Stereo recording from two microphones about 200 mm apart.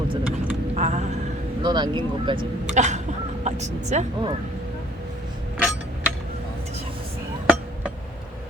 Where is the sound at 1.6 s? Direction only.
20° right (ahead or behind).